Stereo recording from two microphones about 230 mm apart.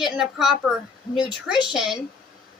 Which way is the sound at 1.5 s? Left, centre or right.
Centre.